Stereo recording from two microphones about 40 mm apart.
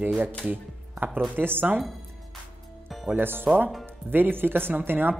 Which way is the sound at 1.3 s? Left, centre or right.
Right.